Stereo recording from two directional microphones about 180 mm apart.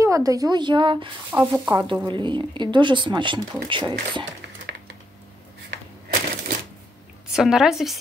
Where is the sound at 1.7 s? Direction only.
25° right (ahead or behind).